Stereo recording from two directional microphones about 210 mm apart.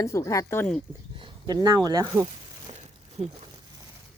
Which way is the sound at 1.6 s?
20° right (ahead or behind).